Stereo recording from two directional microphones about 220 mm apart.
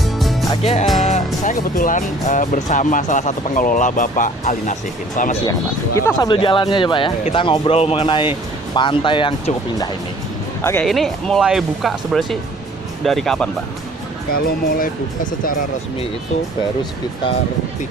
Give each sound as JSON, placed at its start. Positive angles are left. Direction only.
{"t": 0.0, "sound": "music", "side_deg": 0}
{"t": 0.5, "sound": "music", "side_deg": 30}
{"t": 1.0, "sound": "speech", "side_deg": 35}
{"t": 6.0, "sound": "speech", "side_deg": 15}
{"t": 10.6, "sound": "speech", "side_deg": 10}
{"t": 10.8, "sound": "speech", "side_deg": 0}
{"t": 14.3, "sound": "speech", "side_deg": 40}